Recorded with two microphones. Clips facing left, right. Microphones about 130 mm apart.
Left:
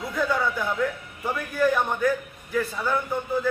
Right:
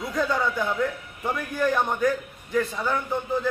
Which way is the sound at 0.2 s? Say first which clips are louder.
Even; centre (ahead or behind).